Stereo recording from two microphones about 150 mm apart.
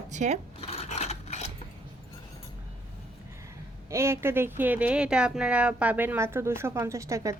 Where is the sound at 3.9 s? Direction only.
20° right (ahead or behind).